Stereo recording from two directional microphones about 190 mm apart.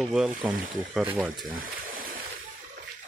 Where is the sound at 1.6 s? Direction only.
50° right (ahead or behind).